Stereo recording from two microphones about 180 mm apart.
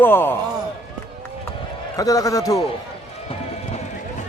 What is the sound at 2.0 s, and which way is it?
Speech, 20° left (ahead or behind).